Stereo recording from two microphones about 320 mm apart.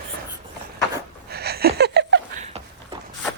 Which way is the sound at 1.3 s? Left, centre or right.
Right.